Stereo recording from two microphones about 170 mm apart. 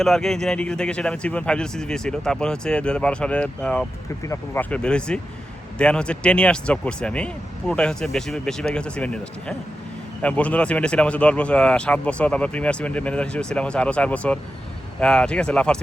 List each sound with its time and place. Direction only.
0.0 s speech: centre (ahead or behind)
4.2 s speech: 15° left (ahead or behind)
4.7 s speech: 5° left (ahead or behind)